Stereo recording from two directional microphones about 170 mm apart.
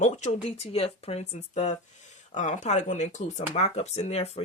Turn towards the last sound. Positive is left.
turn(degrees=40)  # may be behind; listen again after turning